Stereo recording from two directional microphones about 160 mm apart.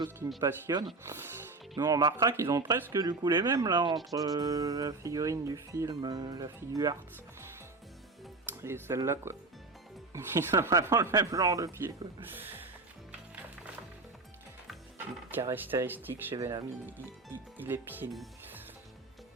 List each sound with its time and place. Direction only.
0.3 s speech: 25° right (ahead or behind)
1.0 s speech: 15° right (ahead or behind)
1.7 s speech: 25° right (ahead or behind)
8.4 s speech: 15° right (ahead or behind)
15.3 s speech: 15° right (ahead or behind)